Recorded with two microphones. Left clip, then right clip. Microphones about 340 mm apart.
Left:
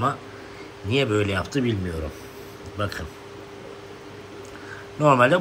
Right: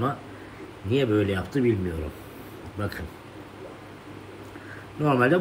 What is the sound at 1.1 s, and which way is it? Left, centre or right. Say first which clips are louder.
Speech: left 1 dB; centre.